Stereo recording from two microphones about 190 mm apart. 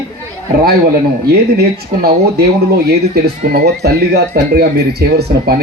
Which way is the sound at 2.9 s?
60° right (ahead or behind).